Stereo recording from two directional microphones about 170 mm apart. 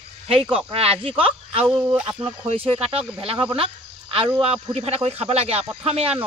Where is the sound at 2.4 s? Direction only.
35° right (ahead or behind).